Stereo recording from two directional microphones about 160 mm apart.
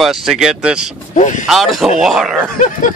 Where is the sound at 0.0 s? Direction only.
Centre (ahead or behind).